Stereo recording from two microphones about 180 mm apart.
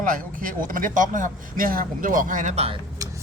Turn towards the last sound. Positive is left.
turn(degrees=-20)  # may be behind; listen again after turning